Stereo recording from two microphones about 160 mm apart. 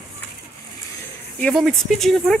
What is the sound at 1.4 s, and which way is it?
Speech, centre (ahead or behind).